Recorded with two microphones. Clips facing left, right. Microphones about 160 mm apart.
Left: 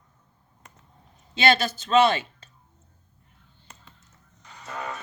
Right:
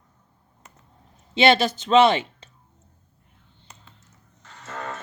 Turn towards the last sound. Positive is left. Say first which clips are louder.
# even
turn(degrees=15)  # may be behind; listen again after turning